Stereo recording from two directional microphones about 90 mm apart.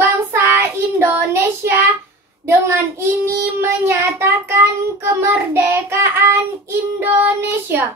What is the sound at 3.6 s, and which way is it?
Child singing, 30° right (ahead or behind).